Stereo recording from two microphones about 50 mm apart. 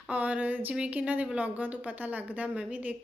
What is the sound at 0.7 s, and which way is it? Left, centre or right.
A woman's voice, right.